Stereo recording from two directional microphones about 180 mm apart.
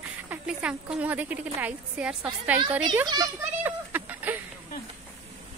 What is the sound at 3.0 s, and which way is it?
Speech, 20° right (ahead or behind).